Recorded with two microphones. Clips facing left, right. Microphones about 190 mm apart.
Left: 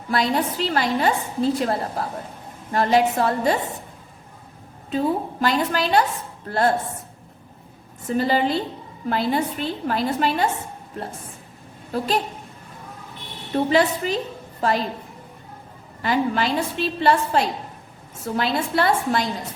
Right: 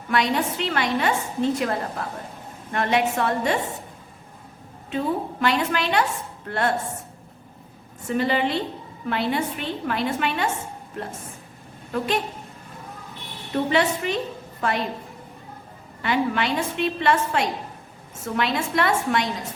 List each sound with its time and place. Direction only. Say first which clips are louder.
0.1 s a woman's voice: left 1 dB; 35° left (ahead or behind)
4.9 s a woman's voice: left 3 dB; 35° left (ahead or behind)
8.0 s a woman's voice: left 2 dB; 35° left (ahead or behind)
11.9 s a woman's voice: left 1 dB; 35° left (ahead or behind)
13.7 s a woman's voice: left 3 dB; 35° left (ahead or behind)
16.0 s a woman's voice: left 2 dB; 35° left (ahead or behind)